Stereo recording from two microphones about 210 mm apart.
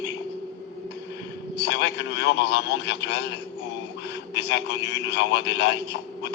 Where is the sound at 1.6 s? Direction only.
55° left (ahead or behind).